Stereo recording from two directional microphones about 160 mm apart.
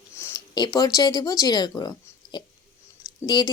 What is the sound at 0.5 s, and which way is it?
A woman's voice, 25° left (ahead or behind).